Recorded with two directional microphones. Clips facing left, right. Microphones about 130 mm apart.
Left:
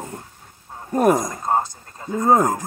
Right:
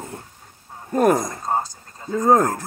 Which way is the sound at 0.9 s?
15° left (ahead or behind).